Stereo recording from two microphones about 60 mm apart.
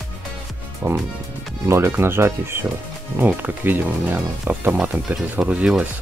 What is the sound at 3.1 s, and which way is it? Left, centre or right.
Speech, right.